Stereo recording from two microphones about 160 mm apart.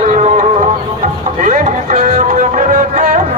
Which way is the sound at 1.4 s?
50° right (ahead or behind).